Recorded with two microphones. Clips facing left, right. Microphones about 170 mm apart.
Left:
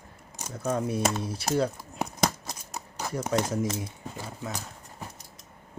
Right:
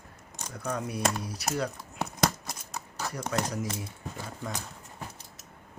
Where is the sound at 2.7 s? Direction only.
10° left (ahead or behind).